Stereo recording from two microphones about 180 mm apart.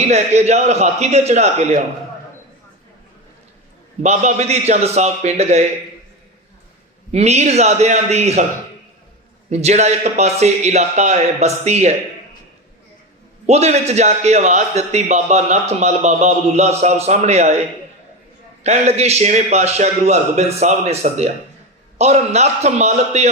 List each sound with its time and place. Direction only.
0.1 s a man's voice: 35° right (ahead or behind)
4.0 s a man's voice: 40° right (ahead or behind)
7.1 s a man's voice: 40° right (ahead or behind)
9.5 s a man's voice: 40° right (ahead or behind)
13.5 s a man's voice: 35° right (ahead or behind)
18.6 s a man's voice: 35° right (ahead or behind)